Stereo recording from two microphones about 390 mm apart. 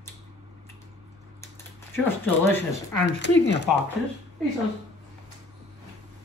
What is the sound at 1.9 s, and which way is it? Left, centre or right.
Speech, centre.